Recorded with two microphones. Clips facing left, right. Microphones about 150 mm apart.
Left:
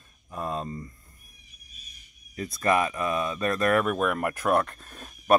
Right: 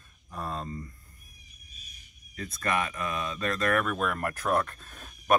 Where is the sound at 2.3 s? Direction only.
25° left (ahead or behind).